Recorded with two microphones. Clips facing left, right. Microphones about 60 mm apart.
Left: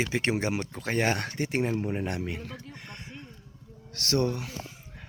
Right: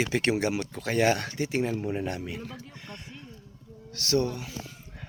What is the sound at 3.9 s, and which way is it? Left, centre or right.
Speech, left.